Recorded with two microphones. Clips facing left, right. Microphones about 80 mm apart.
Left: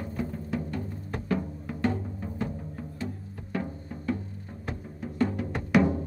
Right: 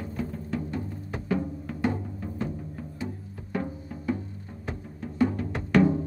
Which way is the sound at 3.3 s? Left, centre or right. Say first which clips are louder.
Right 1 dB; centre.